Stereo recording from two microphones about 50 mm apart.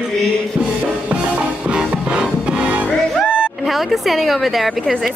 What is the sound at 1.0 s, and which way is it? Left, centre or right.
Music, right.